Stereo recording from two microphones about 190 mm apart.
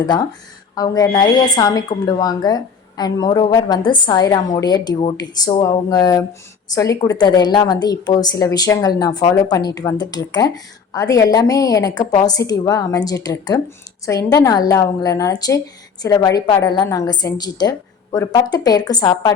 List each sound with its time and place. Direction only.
0.0 s a woman's voice: 20° left (ahead or behind)